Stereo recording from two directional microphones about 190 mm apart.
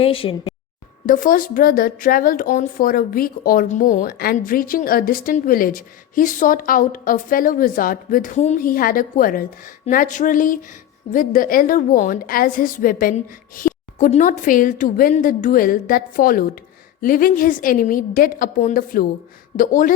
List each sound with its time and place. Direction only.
0.0 s speech: 30° left (ahead or behind)
1.0 s speech: 45° left (ahead or behind)
13.6 s a sound: 50° left (ahead or behind)
14.1 s speech: 40° left (ahead or behind)